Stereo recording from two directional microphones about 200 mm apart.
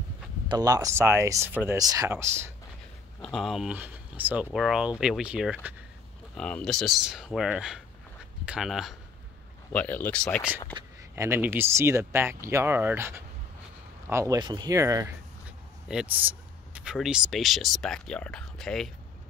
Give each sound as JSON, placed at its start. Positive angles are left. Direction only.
{"t": 0.5, "sound": "speech", "side_deg": -20}
{"t": 3.2, "sound": "speech", "side_deg": 0}
{"t": 6.3, "sound": "speech", "side_deg": 5}
{"t": 10.7, "sound": "speech", "side_deg": -15}